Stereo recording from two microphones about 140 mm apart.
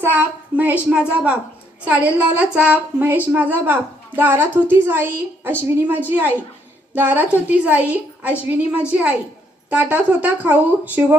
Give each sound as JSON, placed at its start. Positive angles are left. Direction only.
{"t": 0.0, "sound": "a woman's voice", "side_deg": -10}